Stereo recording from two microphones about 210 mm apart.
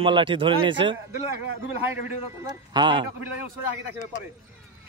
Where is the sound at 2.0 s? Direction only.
20° right (ahead or behind).